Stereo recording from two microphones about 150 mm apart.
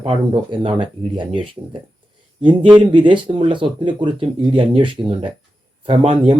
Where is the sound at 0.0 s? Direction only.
35° right (ahead or behind).